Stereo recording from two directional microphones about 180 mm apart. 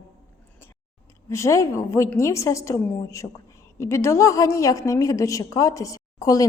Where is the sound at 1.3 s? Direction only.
15° left (ahead or behind).